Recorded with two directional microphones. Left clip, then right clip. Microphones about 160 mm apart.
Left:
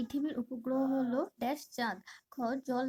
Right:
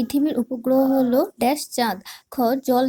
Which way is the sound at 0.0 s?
20° right (ahead or behind).